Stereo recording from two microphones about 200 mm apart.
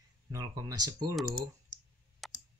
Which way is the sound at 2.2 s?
Centre (ahead or behind).